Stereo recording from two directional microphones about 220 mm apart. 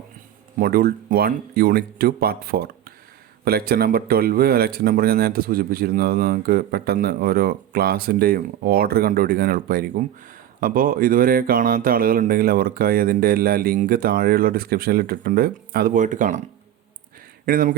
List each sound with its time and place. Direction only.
0.6 s speech: 45° right (ahead or behind)
17.4 s speech: 40° right (ahead or behind)